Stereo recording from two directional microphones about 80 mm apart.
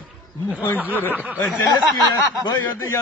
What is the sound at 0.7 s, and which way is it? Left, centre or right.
Speech, right.